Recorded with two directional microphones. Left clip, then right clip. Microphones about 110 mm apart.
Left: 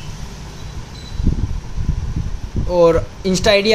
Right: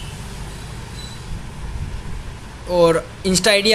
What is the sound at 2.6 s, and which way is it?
Speech, 20° left (ahead or behind).